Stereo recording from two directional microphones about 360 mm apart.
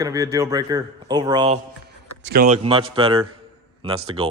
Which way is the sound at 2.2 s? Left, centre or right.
Right.